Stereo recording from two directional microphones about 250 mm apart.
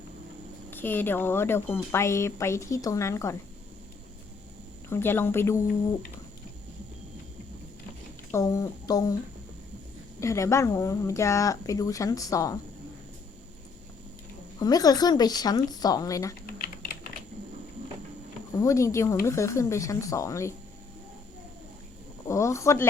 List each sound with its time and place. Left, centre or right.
0.7 s speech: centre
4.9 s speech: centre
8.3 s speech: centre
10.2 s speech: centre
14.6 s speech: centre
16.5 s typing: left
18.6 s speech: centre
22.3 s speech: centre